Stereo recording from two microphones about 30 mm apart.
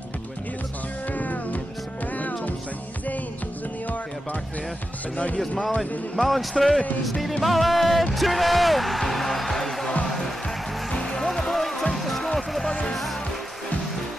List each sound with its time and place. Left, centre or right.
1.1 s music: left
5.1 s speech: left
6.2 s speech: centre
10.0 s music: centre
10.9 s music: left
11.2 s music: centre